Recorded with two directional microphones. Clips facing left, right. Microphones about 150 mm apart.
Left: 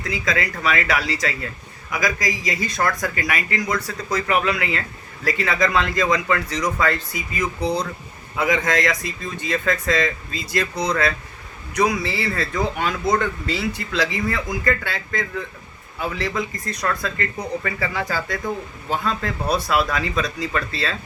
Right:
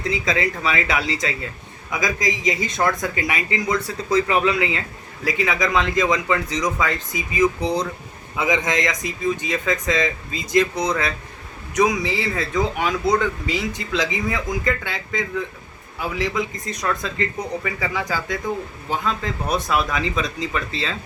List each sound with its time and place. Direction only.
0.1 s a man's voice: 25° right (ahead or behind)
19.0 s speech: 20° right (ahead or behind)